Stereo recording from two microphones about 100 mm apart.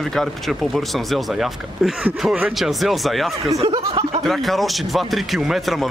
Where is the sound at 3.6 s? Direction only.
85° right.